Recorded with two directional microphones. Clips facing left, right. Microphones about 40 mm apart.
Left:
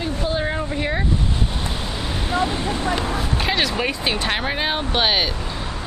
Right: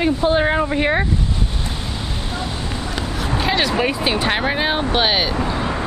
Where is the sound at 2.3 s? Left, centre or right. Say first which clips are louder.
Left 8 dB; left.